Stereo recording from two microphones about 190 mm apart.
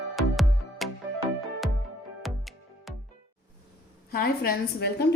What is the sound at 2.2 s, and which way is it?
Music, centre (ahead or behind).